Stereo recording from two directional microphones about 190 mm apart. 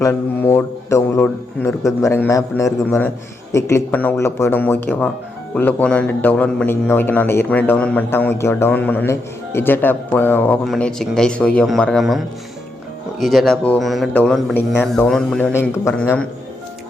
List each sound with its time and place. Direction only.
0.0 s a man's voice: 10° left (ahead or behind)